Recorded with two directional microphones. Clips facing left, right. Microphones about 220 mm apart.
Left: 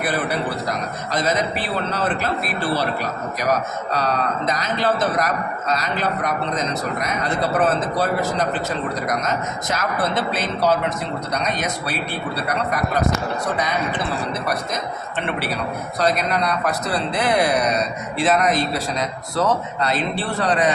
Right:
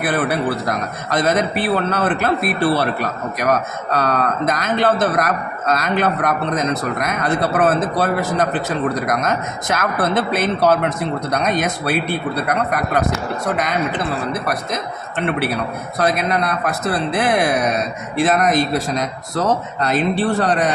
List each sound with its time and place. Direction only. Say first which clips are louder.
1.1 s speech: right 4 dB; 55° right (ahead or behind)
16.0 s speech: right 2 dB; 50° right (ahead or behind)